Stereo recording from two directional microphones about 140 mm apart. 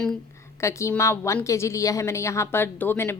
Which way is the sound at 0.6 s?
20° left (ahead or behind).